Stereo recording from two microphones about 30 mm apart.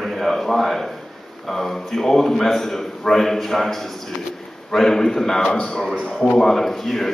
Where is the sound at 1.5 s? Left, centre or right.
Centre.